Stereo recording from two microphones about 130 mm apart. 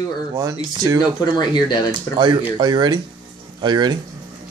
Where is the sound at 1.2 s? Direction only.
35° left (ahead or behind).